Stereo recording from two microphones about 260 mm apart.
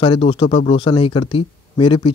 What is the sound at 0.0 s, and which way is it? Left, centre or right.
Speech, left.